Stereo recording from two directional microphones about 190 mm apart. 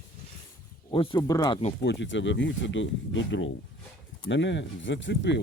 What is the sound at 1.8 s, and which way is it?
Speech, 65° left (ahead or behind).